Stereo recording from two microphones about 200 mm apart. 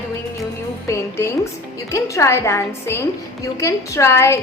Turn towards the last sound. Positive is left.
turn(degrees=15)  # may be behind; listen again after turning